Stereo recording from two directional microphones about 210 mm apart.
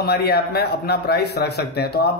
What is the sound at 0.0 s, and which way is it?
Speech, 50° left (ahead or behind).